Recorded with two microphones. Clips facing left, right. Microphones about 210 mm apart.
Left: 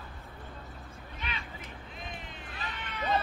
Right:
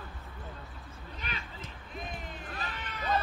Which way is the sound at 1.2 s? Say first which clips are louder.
Left 1 dB; 40° right (ahead or behind).